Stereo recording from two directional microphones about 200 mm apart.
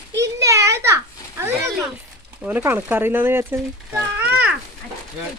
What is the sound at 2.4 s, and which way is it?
Speech, 5° right (ahead or behind).